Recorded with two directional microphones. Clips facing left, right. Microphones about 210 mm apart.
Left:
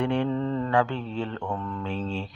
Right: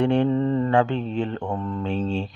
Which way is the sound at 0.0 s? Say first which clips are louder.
Right 5 dB; 30° right (ahead or behind).